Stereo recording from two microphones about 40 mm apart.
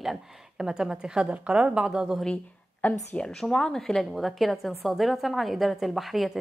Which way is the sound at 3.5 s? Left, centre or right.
Centre.